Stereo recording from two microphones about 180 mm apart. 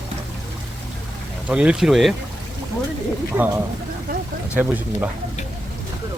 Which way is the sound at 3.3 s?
10° right (ahead or behind).